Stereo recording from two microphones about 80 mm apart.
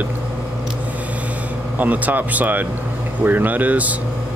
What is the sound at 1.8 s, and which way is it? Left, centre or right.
Speech, right.